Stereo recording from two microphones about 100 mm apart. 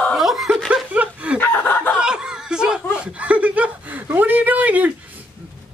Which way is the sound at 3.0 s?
15° right (ahead or behind).